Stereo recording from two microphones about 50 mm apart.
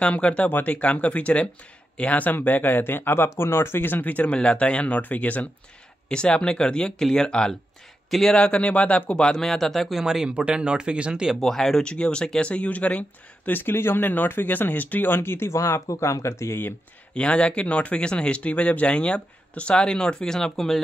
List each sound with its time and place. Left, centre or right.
0.0 s speech: left
4.0 s speech: left
6.0 s speech: left
8.4 s speech: left; by 10.3 s centre
10.3 s speech: right
11.3 s speech: centre
11.8 s speech: centre
13.5 s speech: left
15.5 s speech: left
17.1 s speech: left